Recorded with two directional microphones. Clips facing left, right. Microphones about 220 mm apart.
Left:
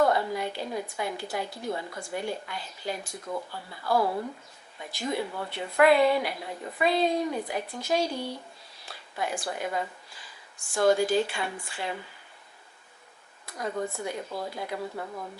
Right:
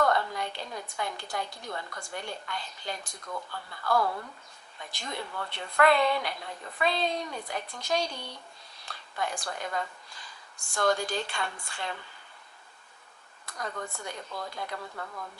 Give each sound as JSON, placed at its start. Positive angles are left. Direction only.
{"t": 0.1, "sound": "a woman's voice", "side_deg": 5}
{"t": 3.9, "sound": "speech", "side_deg": 25}
{"t": 4.8, "sound": "a woman's voice", "side_deg": 5}
{"t": 13.7, "sound": "speech", "side_deg": 20}
{"t": 14.0, "sound": "a woman's voice", "side_deg": 5}